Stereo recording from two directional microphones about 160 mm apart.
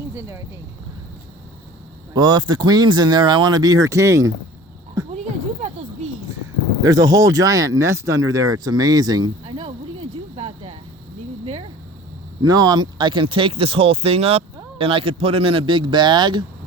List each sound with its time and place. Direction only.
0.1 s speech: 15° right (ahead or behind)
2.1 s speech: 25° right (ahead or behind)
5.1 s a sound: 45° right (ahead or behind)
6.8 s speech: 20° right (ahead or behind)
12.4 s speech: 25° right (ahead or behind)